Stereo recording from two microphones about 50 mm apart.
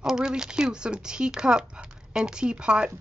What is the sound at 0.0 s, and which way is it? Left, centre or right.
Speech, centre.